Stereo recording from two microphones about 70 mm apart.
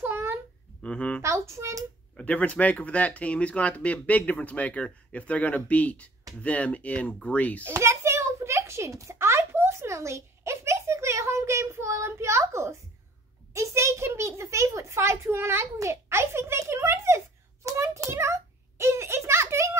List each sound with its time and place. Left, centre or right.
0.0 s babbling: right
0.8 s speech: centre
1.2 s a child's voice: right
2.1 s speech: centre
7.7 s a sound: right
13.5 s a child's voice: right
17.6 s a sound: right